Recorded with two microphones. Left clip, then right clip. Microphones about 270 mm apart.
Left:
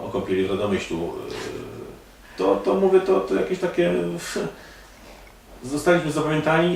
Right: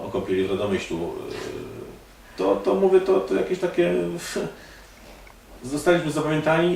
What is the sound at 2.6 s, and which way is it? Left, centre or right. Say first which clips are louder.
Speech: right 1 dB; centre.